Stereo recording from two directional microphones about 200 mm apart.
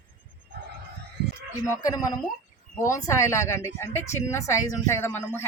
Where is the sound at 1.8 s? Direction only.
20° left (ahead or behind).